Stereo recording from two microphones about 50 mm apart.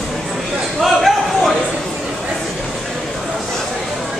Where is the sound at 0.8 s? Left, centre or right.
Centre.